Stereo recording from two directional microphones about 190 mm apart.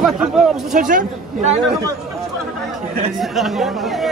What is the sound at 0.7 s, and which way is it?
Speech, 45° right (ahead or behind).